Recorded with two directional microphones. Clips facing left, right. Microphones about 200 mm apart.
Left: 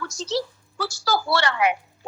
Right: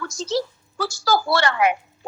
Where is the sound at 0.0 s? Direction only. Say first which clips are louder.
Right 2 dB; 50° right (ahead or behind).